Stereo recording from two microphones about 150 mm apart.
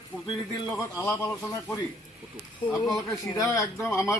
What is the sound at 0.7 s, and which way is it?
A man's voice, 20° left (ahead or behind).